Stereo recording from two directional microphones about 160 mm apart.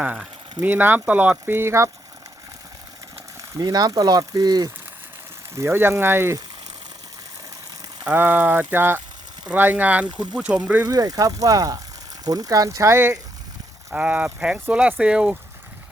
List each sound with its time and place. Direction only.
0.0 s speech: 10° right (ahead or behind)
3.6 s speech: 25° right (ahead or behind)
8.0 s speech: 10° right (ahead or behind)
10.8 s speech: 20° right (ahead or behind); by 15.4 s 5° right (ahead or behind)